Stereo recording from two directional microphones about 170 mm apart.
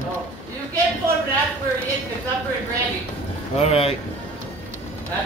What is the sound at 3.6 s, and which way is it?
Speech, 35° left (ahead or behind).